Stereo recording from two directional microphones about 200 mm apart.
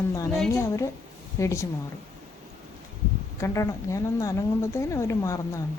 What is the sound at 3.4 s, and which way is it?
A woman's voice, 15° left (ahead or behind).